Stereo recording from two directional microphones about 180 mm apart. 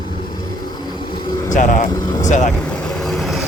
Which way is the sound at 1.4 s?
45° left (ahead or behind).